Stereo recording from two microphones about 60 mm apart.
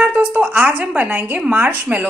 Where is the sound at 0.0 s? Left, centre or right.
Right.